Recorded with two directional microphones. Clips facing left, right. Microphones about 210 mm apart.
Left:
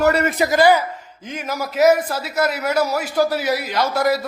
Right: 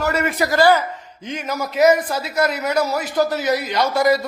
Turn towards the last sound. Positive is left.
turn(degrees=5)  # may be behind; listen again after turning